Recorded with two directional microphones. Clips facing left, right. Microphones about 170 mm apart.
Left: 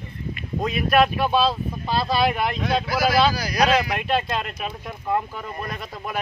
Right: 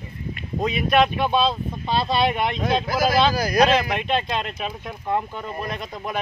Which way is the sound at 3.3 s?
50° right (ahead or behind).